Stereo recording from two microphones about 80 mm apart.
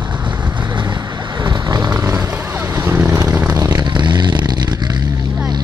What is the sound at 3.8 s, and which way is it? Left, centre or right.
Vehicle, right.